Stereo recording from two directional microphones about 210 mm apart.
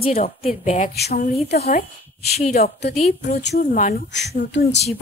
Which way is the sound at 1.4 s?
50° left (ahead or behind).